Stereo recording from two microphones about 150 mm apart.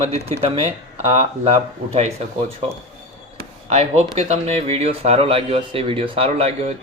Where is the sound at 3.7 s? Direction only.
50° right (ahead or behind).